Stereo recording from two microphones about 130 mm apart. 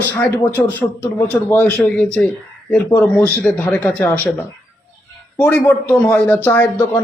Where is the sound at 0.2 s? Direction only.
15° left (ahead or behind).